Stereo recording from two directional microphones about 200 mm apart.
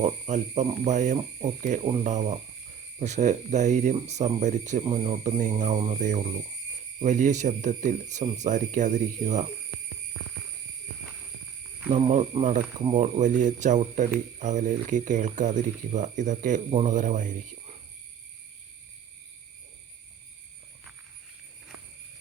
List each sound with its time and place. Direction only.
0.0 s speech: 35° right (ahead or behind)
11.9 s speech: 30° right (ahead or behind)